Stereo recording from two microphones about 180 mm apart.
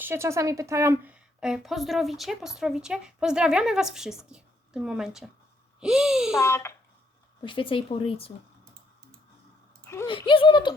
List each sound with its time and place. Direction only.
0.0 s a woman's voice: 15° right (ahead or behind)
6.4 s speech: 15° left (ahead or behind)
7.4 s speech: 30° left (ahead or behind)
9.8 s a sound: 15° left (ahead or behind)
10.1 s speech: 30° left (ahead or behind)